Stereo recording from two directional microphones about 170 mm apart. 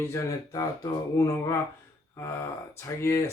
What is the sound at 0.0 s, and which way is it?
Speech, 15° left (ahead or behind).